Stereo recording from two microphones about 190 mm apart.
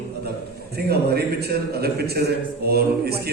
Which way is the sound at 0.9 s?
55° right (ahead or behind).